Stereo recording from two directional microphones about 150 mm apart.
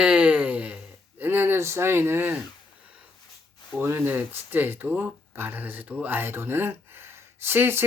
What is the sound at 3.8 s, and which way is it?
Speech, 15° right (ahead or behind).